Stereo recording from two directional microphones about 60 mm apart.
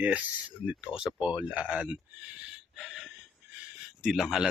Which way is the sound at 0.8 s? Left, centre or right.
Centre.